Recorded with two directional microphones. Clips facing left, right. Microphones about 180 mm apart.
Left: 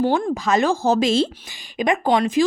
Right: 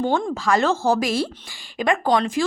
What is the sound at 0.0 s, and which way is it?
A woman's voice, 15° left (ahead or behind).